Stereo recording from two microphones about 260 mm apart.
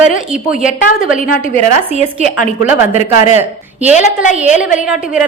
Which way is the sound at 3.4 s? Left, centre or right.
Centre.